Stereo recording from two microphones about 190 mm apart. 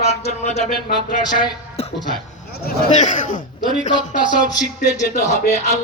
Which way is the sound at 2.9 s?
40° left (ahead or behind).